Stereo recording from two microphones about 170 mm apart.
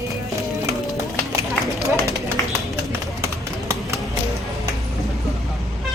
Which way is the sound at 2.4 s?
20° left (ahead or behind).